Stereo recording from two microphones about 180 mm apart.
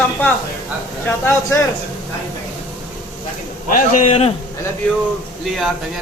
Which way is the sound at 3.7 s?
45° left (ahead or behind).